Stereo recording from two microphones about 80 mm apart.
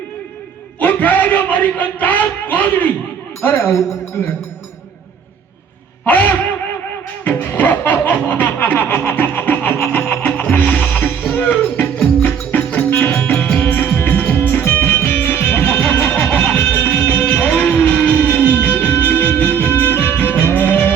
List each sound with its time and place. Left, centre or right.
0.8 s music: centre
3.4 s speech: left
6.1 s music: left
12.9 s music: left
13.3 s music: centre
13.7 s music: left